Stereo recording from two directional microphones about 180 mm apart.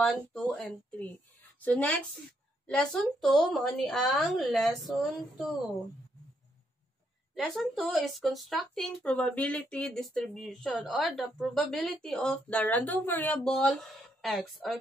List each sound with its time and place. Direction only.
0.0 s a woman's voice: centre (ahead or behind)
7.3 s speech: centre (ahead or behind)